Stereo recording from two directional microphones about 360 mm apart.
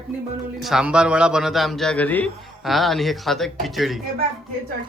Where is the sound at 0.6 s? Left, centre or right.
Centre.